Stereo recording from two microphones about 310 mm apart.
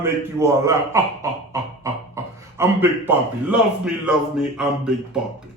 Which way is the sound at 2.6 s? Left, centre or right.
Centre.